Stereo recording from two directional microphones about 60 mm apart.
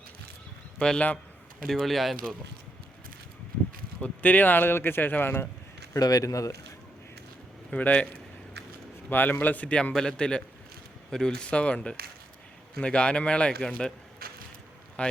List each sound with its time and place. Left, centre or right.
0.8 s speech: centre
1.6 s speech: centre
4.0 s speech: left
5.9 s a man's voice: left
7.7 s a man's voice: left
9.0 s a man's voice: left
9.9 s speech: centre
15.0 s speech: centre